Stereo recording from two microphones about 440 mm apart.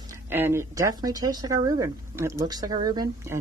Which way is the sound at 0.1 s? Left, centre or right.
Centre.